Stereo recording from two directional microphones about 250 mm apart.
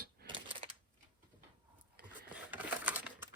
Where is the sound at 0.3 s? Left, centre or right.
Centre.